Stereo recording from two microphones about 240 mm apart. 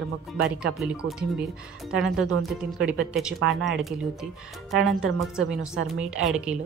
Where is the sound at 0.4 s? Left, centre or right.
Centre.